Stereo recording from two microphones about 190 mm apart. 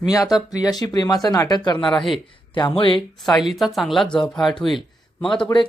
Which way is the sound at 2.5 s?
25° left (ahead or behind).